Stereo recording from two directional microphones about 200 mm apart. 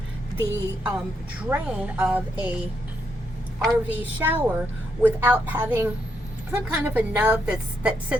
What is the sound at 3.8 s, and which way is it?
A woman's voice, 10° right (ahead or behind).